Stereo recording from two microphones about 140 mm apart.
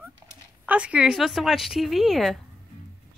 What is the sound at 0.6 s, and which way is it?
Speech, 10° right (ahead or behind).